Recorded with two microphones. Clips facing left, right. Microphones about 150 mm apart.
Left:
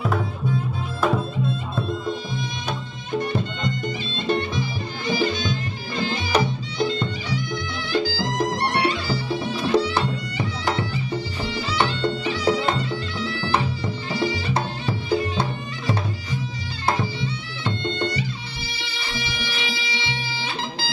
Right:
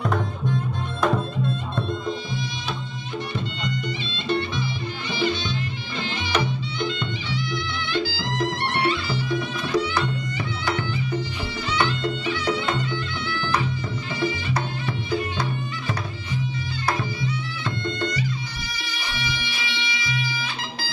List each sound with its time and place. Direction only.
0.0 s music: 5° left (ahead or behind)
4.3 s music: 45° left (ahead or behind)
13.2 s bagpipes: 35° left (ahead or behind)
14.2 s music: 30° left (ahead or behind)
16.8 s music: 30° left (ahead or behind)